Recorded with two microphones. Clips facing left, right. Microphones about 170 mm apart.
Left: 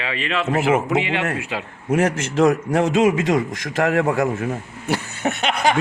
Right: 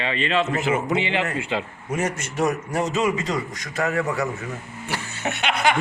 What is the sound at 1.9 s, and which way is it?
A man's voice, 90° left.